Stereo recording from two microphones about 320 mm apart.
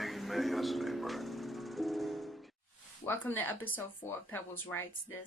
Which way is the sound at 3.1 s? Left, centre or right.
Centre.